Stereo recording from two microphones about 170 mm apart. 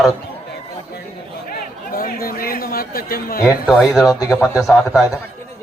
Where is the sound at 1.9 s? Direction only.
60° left (ahead or behind).